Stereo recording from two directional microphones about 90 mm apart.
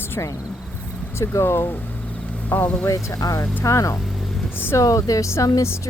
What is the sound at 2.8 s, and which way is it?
Speech, 35° left (ahead or behind).